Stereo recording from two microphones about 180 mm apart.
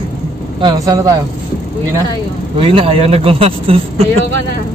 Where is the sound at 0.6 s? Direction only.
20° right (ahead or behind).